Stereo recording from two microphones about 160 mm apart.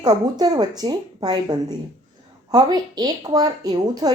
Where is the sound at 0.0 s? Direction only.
25° right (ahead or behind).